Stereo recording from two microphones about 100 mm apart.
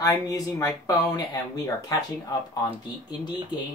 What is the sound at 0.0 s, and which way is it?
Speech, 35° left (ahead or behind).